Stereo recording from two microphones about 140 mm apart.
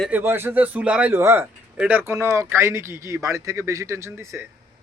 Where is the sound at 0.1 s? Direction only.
15° right (ahead or behind).